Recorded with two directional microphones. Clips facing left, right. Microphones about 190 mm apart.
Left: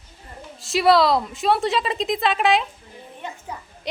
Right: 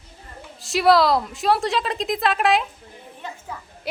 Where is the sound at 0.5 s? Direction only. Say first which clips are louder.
Even; centre (ahead or behind).